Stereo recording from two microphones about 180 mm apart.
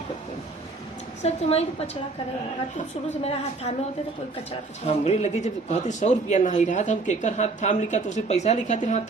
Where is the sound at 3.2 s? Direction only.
35° left (ahead or behind).